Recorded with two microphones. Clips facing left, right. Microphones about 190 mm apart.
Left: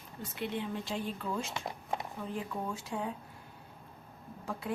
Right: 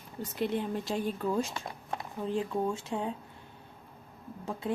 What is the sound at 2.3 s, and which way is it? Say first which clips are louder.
Speech: right 8 dB; 30° right (ahead or behind).